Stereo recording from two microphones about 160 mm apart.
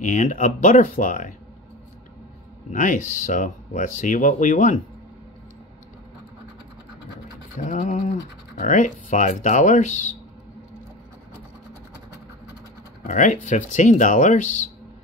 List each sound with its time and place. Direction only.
0.0 s speech: 55° left (ahead or behind)
2.7 s speech: 55° left (ahead or behind)
7.5 s speech: 50° left (ahead or behind)
13.0 s speech: 50° left (ahead or behind)